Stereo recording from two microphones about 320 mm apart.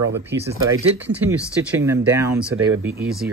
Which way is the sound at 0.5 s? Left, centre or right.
Centre.